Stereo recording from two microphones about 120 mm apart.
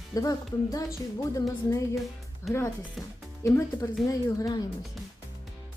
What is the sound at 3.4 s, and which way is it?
Speech, 20° left (ahead or behind).